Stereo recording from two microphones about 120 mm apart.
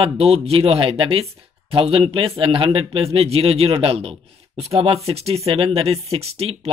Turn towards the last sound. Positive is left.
turn(degrees=-60)  # may be behind; listen again after turning